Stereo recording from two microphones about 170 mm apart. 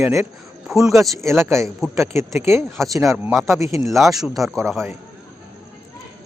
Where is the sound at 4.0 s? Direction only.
Centre (ahead or behind).